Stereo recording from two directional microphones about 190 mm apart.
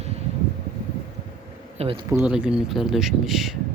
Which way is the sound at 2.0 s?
10° right (ahead or behind).